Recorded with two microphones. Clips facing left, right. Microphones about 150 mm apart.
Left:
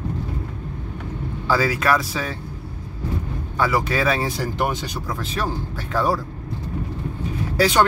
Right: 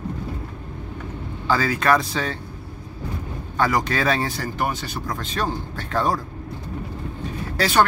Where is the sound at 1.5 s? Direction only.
10° left (ahead or behind).